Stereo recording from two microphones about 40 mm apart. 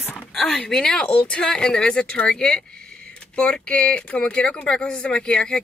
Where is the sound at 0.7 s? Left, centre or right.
Centre.